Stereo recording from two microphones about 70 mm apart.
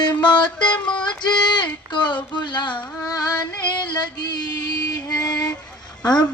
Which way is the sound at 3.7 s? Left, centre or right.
Left.